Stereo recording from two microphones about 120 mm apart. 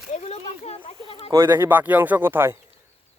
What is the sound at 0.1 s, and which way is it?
A child's voice, 65° left (ahead or behind).